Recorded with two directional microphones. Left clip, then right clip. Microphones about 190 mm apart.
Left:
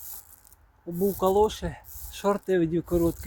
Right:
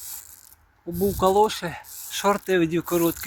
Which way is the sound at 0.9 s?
20° right (ahead or behind).